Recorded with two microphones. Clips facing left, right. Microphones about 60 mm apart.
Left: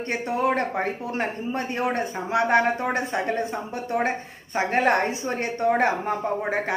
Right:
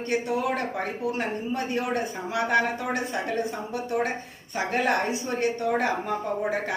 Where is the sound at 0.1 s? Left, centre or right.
Left.